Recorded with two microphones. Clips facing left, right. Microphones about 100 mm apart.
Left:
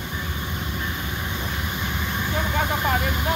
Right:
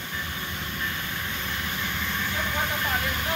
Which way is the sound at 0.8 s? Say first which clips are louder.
Left 3 dB; 20° left (ahead or behind).